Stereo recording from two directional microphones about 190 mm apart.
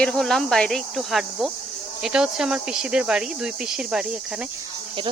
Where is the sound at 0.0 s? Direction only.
Centre (ahead or behind).